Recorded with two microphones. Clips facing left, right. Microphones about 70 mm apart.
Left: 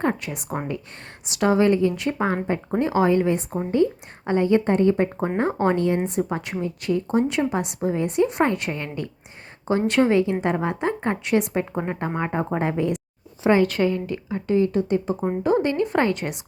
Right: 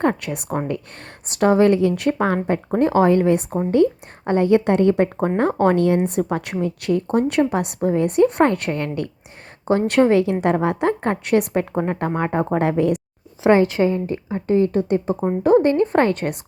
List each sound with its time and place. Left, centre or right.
1.3 s a woman's voice: right
2.6 s a woman's voice: right
11.7 s a woman's voice: right
11.9 s speech: right
13.6 s a woman's voice: right